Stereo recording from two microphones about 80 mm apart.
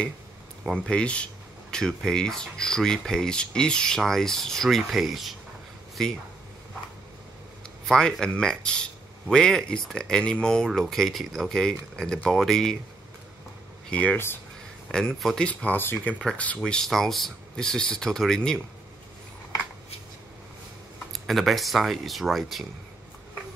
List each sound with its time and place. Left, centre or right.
0.7 s speech: centre
7.8 s speech: centre
13.8 s speech: centre
14.1 s speech: left
15.1 s speech: centre
15.4 s speech: centre
16.5 s speech: centre
21.1 s speech: centre